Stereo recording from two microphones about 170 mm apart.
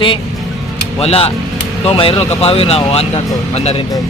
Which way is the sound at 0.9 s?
35° left (ahead or behind).